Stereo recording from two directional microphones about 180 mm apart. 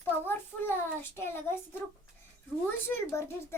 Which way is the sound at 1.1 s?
15° left (ahead or behind).